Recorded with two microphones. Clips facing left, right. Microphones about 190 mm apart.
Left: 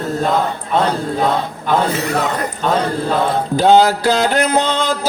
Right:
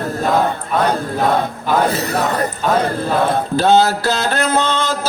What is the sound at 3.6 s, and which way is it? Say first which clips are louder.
Mantra: left 3 dB; 15° left (ahead or behind).